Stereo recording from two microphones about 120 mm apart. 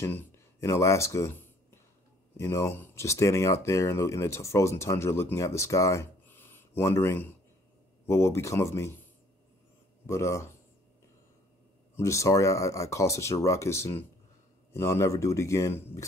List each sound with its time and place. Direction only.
0.0 s speech: 20° left (ahead or behind)
2.3 s speech: 25° left (ahead or behind)
10.0 s speech: 25° left (ahead or behind)
11.9 s speech: 25° left (ahead or behind)